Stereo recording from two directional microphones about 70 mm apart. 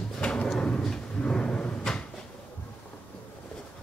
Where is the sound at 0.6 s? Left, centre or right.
Centre.